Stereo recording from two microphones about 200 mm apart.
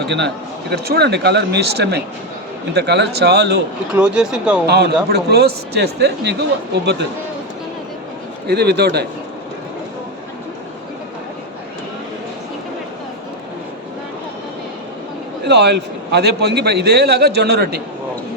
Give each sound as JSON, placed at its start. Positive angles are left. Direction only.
{"t": 0.0, "sound": "a man's voice", "side_deg": -60}
{"t": 3.9, "sound": "speech", "side_deg": -5}
{"t": 4.6, "sound": "a man's voice", "side_deg": -55}
{"t": 8.4, "sound": "a man's voice", "side_deg": -55}
{"t": 15.4, "sound": "a man's voice", "side_deg": -55}